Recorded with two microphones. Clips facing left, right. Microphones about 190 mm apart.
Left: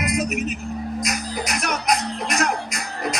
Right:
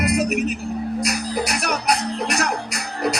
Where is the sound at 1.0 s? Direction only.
35° right (ahead or behind).